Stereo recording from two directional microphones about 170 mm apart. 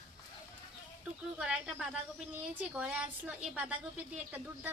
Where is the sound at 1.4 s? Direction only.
5° right (ahead or behind).